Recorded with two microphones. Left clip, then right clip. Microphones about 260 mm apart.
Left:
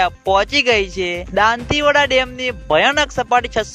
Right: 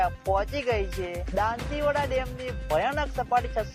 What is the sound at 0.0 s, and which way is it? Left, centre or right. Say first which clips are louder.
Speech: left 10 dB; left.